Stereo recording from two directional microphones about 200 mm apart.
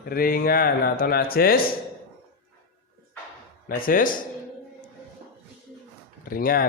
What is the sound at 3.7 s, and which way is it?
Speech, 45° left (ahead or behind).